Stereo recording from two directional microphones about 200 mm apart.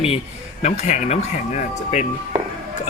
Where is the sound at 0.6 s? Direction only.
35° left (ahead or behind).